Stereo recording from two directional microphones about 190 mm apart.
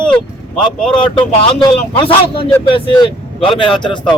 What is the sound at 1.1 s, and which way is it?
Speech, 25° left (ahead or behind).